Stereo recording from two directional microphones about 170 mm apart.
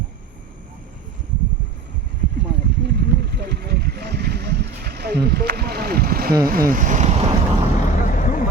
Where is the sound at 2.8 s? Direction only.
75° right (ahead or behind); by 6.3 s 60° right (ahead or behind).